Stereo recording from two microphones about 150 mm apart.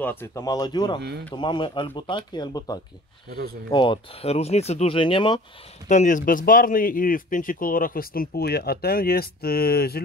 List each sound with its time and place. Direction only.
0.0 s speech: 15° left (ahead or behind)
3.3 s speech: 90° right
3.7 s speech: 30° left (ahead or behind)
5.9 s speech: 55° left (ahead or behind); by 10.0 s 90° left